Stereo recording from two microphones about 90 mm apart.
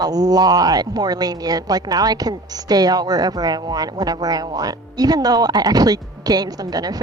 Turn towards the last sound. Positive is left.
turn(degrees=-45)  # may be behind; listen again after turning